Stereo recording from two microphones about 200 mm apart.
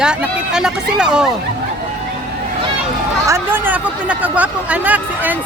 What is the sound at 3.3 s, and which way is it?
Speech, 10° right (ahead or behind).